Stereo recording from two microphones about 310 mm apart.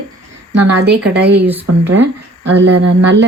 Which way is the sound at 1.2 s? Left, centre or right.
Right.